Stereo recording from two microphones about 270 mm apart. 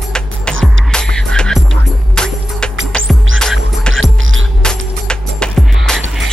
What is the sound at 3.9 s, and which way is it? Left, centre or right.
Music, right.